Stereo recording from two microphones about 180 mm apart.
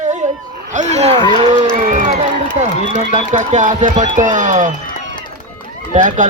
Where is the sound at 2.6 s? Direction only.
40° right (ahead or behind).